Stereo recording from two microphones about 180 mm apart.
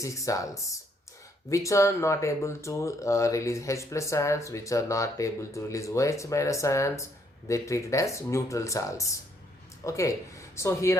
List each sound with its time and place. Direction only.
0.0 s speech: 20° left (ahead or behind)